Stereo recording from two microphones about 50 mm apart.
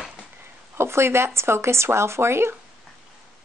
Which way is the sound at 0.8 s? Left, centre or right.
Right.